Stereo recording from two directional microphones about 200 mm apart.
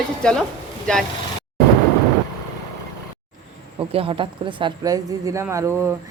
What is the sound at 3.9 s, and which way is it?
A woman's voice, 25° right (ahead or behind).